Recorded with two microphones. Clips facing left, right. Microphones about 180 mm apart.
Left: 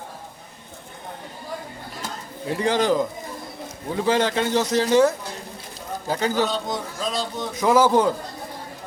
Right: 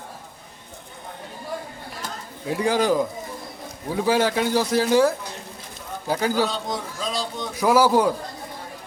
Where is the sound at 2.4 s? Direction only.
5° right (ahead or behind).